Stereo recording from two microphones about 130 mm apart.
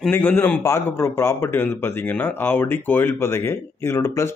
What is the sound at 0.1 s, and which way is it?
A man's voice, 15° left (ahead or behind).